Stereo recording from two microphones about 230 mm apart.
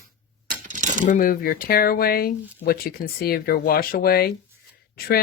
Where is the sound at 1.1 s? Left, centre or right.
Left.